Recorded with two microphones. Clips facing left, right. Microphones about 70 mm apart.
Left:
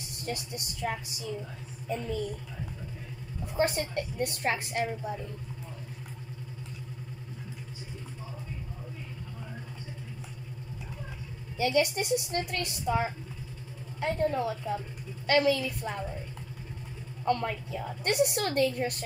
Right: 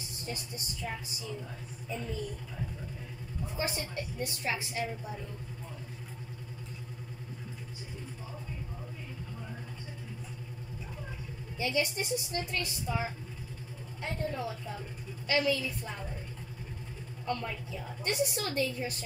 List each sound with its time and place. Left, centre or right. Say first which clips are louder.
0.0 s speech: left 4 dB; left
3.5 s a woman's voice: left 8 dB; left
11.5 s a woman's voice: left 5 dB; left
17.2 s a woman's voice: left 7 dB; left